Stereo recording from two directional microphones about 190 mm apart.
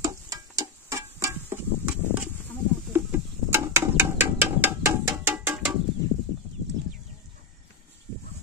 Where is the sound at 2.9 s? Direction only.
15° right (ahead or behind).